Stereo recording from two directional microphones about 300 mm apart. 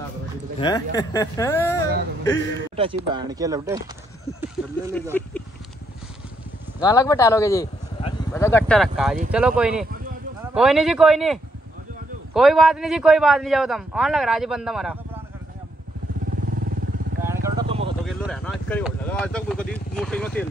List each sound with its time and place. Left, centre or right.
0.6 s speech: centre
2.7 s speech: centre
6.8 s a man's voice: centre
12.4 s a man's voice: centre
17.2 s vehicle: centre
18.0 s speech: centre